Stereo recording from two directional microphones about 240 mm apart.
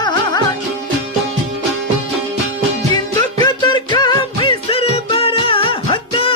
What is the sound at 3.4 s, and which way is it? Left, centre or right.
Music, centre.